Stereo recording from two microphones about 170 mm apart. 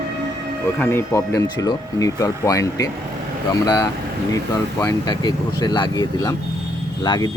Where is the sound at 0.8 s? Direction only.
15° left (ahead or behind).